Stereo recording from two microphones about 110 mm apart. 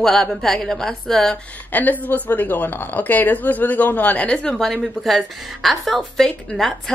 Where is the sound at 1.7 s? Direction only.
15° left (ahead or behind).